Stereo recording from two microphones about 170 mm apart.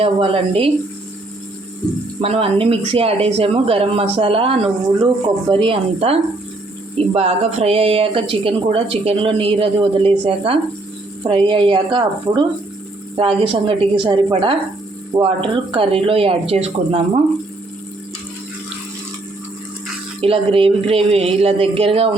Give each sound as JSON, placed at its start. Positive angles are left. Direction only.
{"t": 0.0, "sound": "speech", "side_deg": -35}
{"t": 2.2, "sound": "speech", "side_deg": -35}
{"t": 20.2, "sound": "speech", "side_deg": -35}